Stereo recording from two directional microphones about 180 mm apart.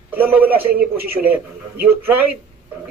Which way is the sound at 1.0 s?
55° right (ahead or behind).